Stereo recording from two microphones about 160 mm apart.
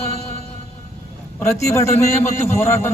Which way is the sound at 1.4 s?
20° left (ahead or behind).